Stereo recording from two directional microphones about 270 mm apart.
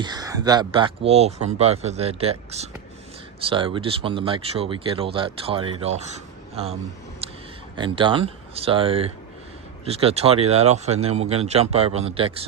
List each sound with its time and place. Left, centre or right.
0.0 s speech: centre
7.2 s a sound: right
7.8 s speech: centre